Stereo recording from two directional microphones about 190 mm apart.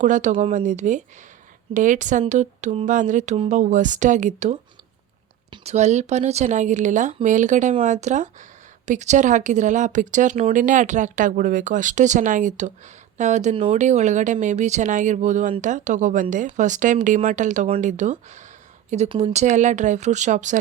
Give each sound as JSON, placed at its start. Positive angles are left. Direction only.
{"t": 0.0, "sound": "speech", "side_deg": -40}